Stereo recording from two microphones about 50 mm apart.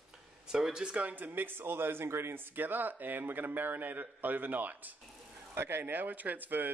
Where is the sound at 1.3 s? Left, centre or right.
Right.